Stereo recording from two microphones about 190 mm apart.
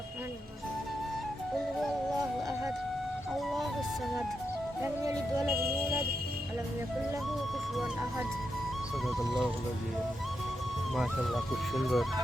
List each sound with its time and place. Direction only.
3.3 s music: centre (ahead or behind)
4.8 s music: 15° right (ahead or behind)
9.0 s speech: centre (ahead or behind)
10.9 s speech: centre (ahead or behind)